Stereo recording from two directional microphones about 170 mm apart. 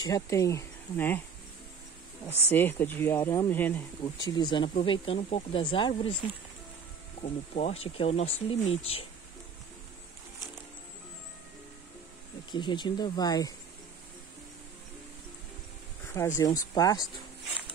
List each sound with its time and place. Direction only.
0.0 s speech: 20° left (ahead or behind)
2.5 s speech: 10° left (ahead or behind)
4.3 s speech: 25° left (ahead or behind)
7.2 s speech: 40° left (ahead or behind)
12.4 s speech: 25° left (ahead or behind)
16.1 s speech: 15° left (ahead or behind)